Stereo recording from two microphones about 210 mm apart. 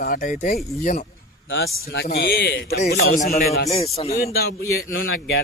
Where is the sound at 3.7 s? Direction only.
30° left (ahead or behind).